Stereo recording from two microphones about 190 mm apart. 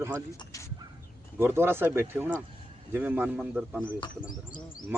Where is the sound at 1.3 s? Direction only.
10° right (ahead or behind).